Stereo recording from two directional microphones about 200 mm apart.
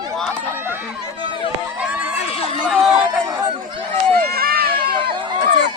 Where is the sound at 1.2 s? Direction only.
25° right (ahead or behind).